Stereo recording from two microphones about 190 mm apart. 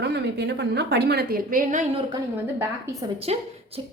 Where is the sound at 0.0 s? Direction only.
60° right (ahead or behind); by 2.0 s 35° right (ahead or behind).